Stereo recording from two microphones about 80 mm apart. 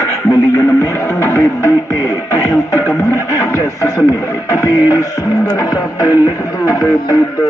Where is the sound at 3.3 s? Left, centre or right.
Left.